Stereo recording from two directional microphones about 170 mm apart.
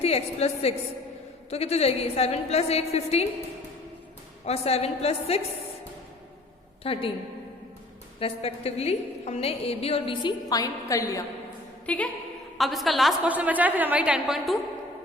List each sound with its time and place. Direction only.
0.0 s a woman's voice: 40° left (ahead or behind)
4.4 s a woman's voice: 35° left (ahead or behind)
6.8 s a woman's voice: 35° left (ahead or behind)
8.2 s a woman's voice: 35° left (ahead or behind); by 11.3 s 20° left (ahead or behind)
11.9 s a woman's voice: 10° left (ahead or behind)